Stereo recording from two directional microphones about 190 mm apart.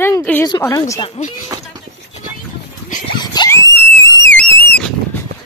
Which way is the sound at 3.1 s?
20° left (ahead or behind).